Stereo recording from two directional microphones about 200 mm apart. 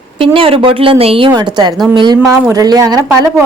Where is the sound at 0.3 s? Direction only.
25° right (ahead or behind).